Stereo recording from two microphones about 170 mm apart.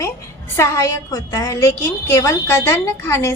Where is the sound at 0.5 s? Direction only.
15° left (ahead or behind).